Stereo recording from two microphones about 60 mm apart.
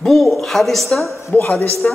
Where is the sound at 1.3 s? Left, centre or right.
Left.